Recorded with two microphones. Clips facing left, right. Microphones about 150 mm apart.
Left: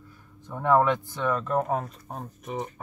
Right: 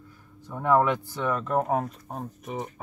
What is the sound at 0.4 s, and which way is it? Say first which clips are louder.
Speech: even; 5° right (ahead or behind).